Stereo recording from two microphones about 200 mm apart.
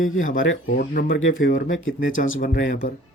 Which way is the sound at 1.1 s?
70° left (ahead or behind).